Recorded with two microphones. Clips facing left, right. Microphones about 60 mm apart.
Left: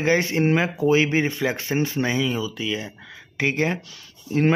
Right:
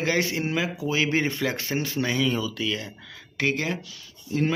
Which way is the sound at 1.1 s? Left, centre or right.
Centre.